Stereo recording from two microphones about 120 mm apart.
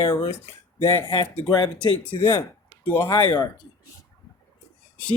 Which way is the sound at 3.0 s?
45° left (ahead or behind).